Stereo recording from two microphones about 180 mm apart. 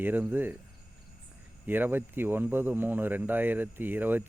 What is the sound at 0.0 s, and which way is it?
Speech, 10° right (ahead or behind).